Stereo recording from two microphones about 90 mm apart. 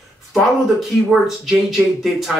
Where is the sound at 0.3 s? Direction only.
Centre (ahead or behind).